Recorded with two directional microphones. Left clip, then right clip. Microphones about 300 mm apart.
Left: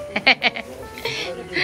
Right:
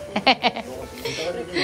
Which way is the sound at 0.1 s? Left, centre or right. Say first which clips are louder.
Left 2 dB; centre.